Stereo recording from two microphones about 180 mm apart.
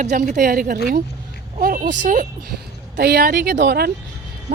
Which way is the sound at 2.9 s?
60° right (ahead or behind).